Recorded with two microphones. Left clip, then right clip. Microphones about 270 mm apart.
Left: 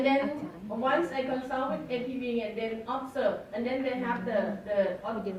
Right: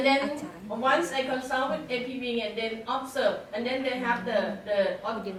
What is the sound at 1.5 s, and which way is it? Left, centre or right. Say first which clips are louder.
Speech: right 3 dB; centre.